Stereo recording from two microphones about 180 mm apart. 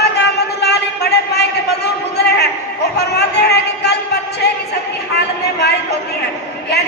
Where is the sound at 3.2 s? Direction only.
70° left (ahead or behind).